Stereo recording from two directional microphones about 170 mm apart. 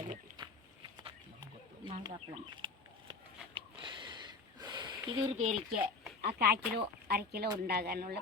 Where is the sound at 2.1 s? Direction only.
35° right (ahead or behind).